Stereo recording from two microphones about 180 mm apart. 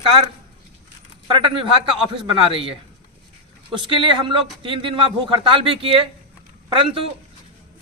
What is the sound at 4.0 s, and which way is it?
A man's voice, 30° right (ahead or behind).